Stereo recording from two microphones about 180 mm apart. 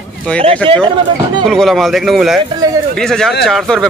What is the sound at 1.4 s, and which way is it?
A man's voice, centre (ahead or behind).